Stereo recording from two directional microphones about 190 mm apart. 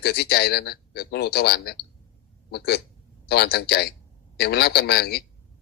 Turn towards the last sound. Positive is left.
turn(degrees=60)  # may be behind; listen again after turning